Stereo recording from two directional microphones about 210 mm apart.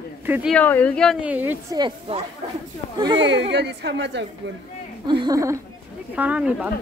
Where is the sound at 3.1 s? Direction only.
55° right (ahead or behind).